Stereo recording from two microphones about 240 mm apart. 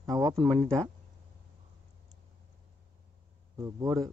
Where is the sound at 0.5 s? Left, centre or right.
Centre.